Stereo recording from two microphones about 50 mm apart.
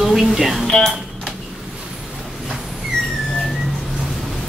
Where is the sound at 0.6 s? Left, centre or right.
Centre.